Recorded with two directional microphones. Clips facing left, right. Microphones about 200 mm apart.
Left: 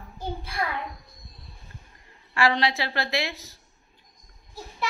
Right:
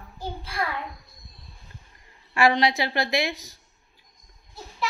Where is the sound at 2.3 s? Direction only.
15° right (ahead or behind).